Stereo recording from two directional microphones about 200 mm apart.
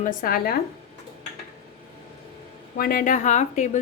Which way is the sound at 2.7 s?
45° left (ahead or behind).